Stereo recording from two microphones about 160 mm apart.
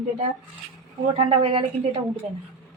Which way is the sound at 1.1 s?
35° right (ahead or behind).